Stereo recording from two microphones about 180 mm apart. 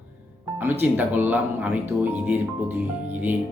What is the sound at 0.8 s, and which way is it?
Speech, 10° right (ahead or behind).